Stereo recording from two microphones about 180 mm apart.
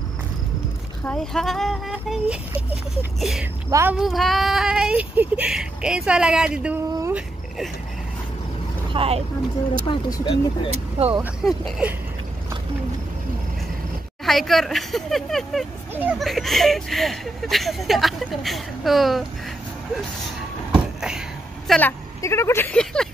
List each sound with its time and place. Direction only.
1.0 s speech: 5° left (ahead or behind)
8.9 s speech: 35° right (ahead or behind)
9.8 s speech: 20° left (ahead or behind)
11.2 s speech: 5° right (ahead or behind)
14.2 s speech: centre (ahead or behind)
20.7 s a sound: 5° right (ahead or behind)
21.6 s a woman's voice: 10° left (ahead or behind)